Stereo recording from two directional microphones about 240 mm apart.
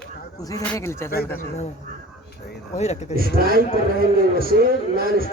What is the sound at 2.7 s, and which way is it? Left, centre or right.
Speech, left.